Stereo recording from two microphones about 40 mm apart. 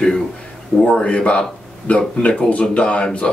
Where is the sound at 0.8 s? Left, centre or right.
Left.